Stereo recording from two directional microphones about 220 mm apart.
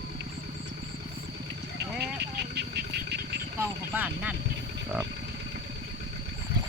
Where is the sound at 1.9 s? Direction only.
50° right (ahead or behind).